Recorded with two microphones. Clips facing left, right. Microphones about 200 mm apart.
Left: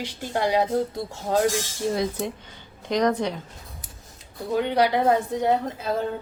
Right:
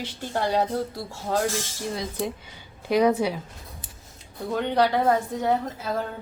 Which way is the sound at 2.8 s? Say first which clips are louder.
Right 2 dB; 5° right (ahead or behind).